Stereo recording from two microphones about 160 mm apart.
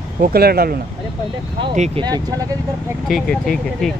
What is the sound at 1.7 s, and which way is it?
Speech, 45° right (ahead or behind).